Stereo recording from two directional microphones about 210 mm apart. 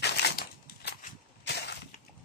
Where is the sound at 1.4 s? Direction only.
50° left (ahead or behind).